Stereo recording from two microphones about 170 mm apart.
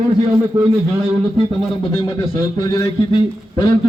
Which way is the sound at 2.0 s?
20° left (ahead or behind).